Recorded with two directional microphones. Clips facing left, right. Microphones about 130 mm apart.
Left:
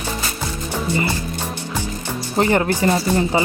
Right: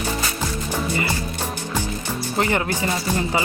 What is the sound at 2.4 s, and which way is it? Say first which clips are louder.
Speech: left 5 dB; 35° left (ahead or behind).